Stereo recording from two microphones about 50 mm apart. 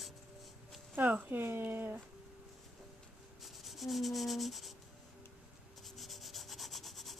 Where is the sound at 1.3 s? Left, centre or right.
Right.